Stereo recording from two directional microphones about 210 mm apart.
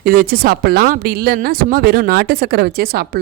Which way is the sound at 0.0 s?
40° right (ahead or behind).